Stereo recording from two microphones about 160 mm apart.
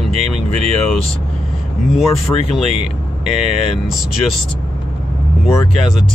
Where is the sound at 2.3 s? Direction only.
20° left (ahead or behind).